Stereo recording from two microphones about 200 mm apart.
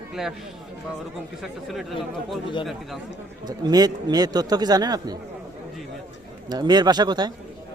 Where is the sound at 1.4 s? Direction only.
Centre (ahead or behind).